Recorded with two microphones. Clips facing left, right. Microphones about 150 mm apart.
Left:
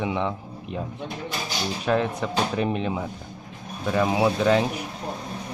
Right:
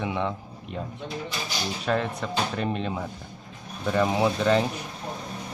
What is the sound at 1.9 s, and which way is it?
Speech, 10° left (ahead or behind).